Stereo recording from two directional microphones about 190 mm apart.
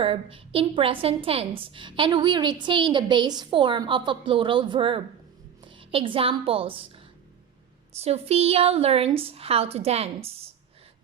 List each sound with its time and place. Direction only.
0.0 s a woman's voice: 30° right (ahead or behind)
7.9 s a woman's voice: 35° right (ahead or behind)